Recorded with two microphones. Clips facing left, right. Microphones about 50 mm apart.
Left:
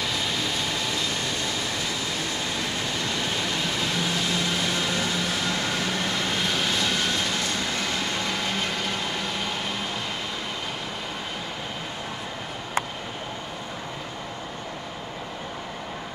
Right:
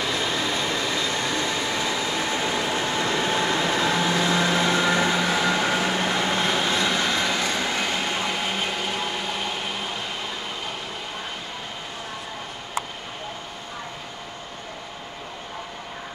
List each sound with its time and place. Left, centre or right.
1.1 s train: right; by 9.8 s centre